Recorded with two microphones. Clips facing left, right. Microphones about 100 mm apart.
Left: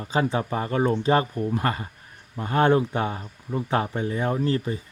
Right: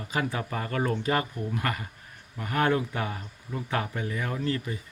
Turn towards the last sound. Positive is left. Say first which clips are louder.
# left 6 dB
turn(degrees=30)  # may be behind; listen again after turning